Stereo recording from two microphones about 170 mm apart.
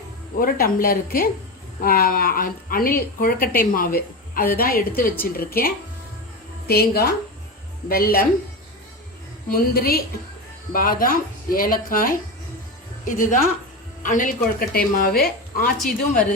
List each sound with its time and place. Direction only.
0.3 s a woman's voice: 55° left (ahead or behind)
9.5 s a woman's voice: 60° left (ahead or behind)
15.8 s speech: centre (ahead or behind)